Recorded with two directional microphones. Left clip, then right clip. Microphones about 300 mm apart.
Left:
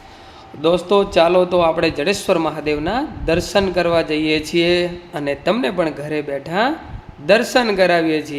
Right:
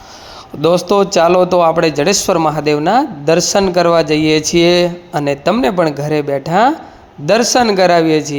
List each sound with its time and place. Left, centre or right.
0.9 s speech: centre